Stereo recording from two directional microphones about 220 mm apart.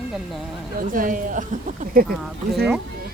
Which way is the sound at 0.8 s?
40° right (ahead or behind).